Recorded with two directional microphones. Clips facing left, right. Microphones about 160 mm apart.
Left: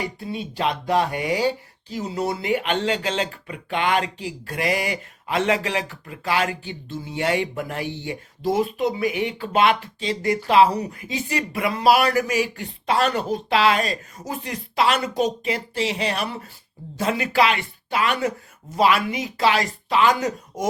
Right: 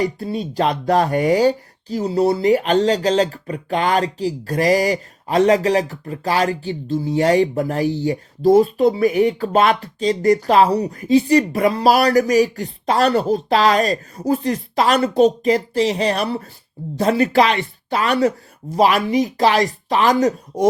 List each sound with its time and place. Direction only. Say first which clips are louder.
0.0 s speech: right 7 dB; 40° right (ahead or behind)